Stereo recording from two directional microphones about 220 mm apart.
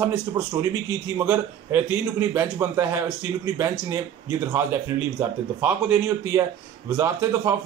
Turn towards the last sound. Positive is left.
turn(degrees=-10)  # may be behind; listen again after turning